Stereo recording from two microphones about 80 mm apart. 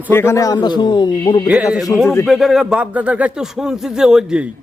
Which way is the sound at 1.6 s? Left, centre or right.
Centre.